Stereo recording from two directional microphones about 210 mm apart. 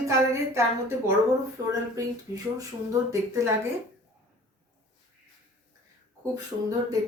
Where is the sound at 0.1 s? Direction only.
15° right (ahead or behind).